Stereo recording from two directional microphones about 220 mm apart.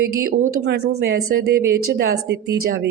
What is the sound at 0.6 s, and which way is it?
Speech, 50° right (ahead or behind).